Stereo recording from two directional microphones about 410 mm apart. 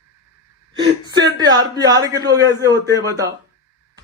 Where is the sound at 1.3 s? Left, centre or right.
Centre.